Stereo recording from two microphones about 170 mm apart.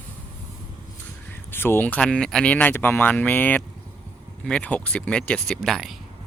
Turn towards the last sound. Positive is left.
turn(degrees=0)  # may be behind; listen again after turning